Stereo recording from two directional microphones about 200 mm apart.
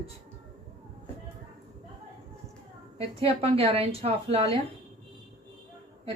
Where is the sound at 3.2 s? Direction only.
30° right (ahead or behind).